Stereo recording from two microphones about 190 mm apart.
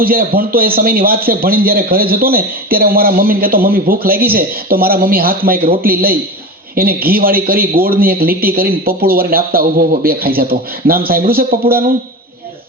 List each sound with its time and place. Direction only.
0.0 s a man's voice: 50° right (ahead or behind)